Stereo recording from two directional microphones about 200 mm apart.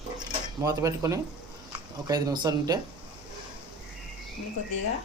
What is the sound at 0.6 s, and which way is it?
Speech, 15° right (ahead or behind).